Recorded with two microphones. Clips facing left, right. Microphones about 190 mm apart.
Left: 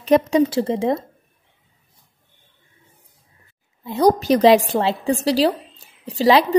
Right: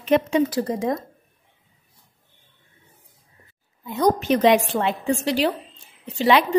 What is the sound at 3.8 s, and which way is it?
A woman's voice, 30° left (ahead or behind).